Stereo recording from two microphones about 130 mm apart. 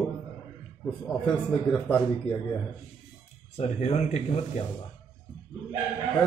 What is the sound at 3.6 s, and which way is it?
Speech, 55° left (ahead or behind).